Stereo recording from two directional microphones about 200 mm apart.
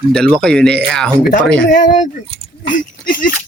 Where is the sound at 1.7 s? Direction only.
40° left (ahead or behind).